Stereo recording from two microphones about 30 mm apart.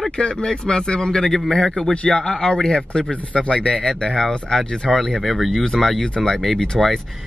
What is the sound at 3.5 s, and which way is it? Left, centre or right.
Speech, left.